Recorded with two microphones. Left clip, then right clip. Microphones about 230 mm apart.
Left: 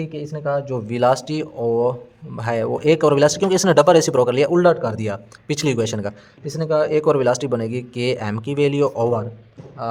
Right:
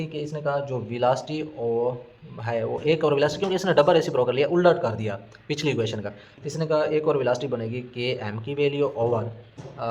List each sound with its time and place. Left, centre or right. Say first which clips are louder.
0.0 s speech: left 2 dB; left